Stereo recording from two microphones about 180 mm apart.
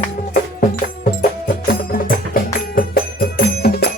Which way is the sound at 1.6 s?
55° left (ahead or behind).